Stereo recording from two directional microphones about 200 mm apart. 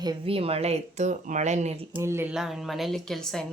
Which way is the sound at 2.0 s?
10° right (ahead or behind).